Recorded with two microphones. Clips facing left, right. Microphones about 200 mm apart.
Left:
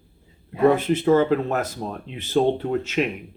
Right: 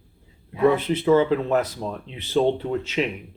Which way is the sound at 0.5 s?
45° left (ahead or behind).